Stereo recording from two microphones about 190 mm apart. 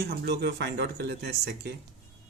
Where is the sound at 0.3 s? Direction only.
60° right (ahead or behind).